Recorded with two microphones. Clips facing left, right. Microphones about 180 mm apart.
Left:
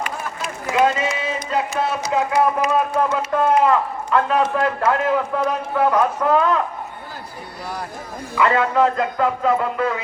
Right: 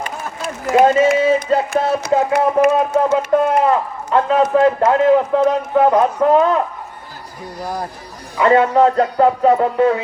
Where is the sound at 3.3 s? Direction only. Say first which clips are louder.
Even; 25° right (ahead or behind).